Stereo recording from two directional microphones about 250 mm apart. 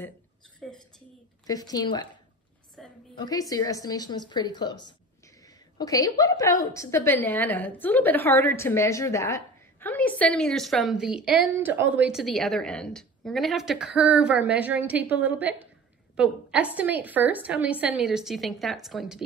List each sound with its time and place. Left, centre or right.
0.6 s a woman's voice: centre
1.5 s a woman's voice: centre
2.8 s a sound: centre
3.2 s a woman's voice: centre